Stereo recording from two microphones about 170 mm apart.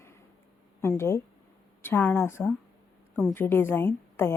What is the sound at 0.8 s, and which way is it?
A woman's voice, 15° left (ahead or behind).